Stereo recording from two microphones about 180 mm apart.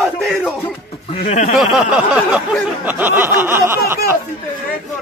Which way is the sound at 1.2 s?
40° left (ahead or behind).